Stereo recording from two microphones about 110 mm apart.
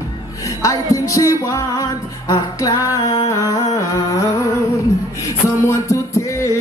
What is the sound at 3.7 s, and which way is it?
Humming, 30° left (ahead or behind).